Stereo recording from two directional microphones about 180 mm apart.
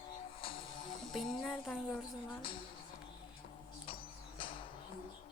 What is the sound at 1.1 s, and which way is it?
Speech, centre (ahead or behind).